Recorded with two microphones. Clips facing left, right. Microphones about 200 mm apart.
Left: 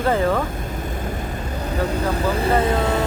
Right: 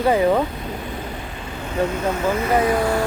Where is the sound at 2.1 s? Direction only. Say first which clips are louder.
Left 2 dB; 35° left (ahead or behind).